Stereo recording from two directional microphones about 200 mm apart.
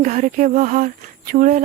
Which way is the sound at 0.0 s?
40° right (ahead or behind).